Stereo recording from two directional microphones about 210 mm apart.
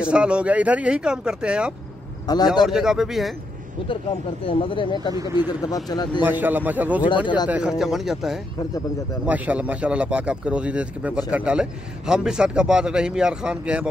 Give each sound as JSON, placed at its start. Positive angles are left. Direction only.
{"t": 0.0, "sound": "speech", "side_deg": -5}
{"t": 2.2, "sound": "speech", "side_deg": 20}
{"t": 2.6, "sound": "speech", "side_deg": 0}
{"t": 4.5, "sound": "speech", "side_deg": 25}
{"t": 5.1, "sound": "a man's voice", "side_deg": -15}
{"t": 5.9, "sound": "speech", "side_deg": 20}
{"t": 6.2, "sound": "a man's voice", "side_deg": -10}